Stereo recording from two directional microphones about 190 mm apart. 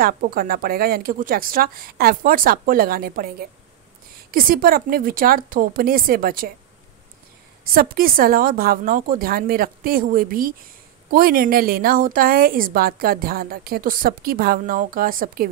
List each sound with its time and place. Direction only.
0.0 s a woman's voice: 50° right (ahead or behind)
7.6 s a woman's voice: 50° right (ahead or behind)